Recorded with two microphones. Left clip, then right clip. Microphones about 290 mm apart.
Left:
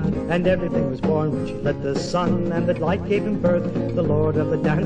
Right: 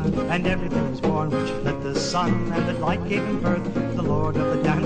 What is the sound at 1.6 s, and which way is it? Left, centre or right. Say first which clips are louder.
Music: left 2 dB; right.